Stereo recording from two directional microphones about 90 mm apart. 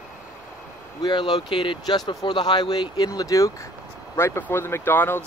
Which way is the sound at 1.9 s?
55° left (ahead or behind).